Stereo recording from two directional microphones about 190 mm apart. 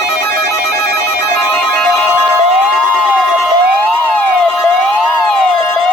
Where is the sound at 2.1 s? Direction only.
10° right (ahead or behind).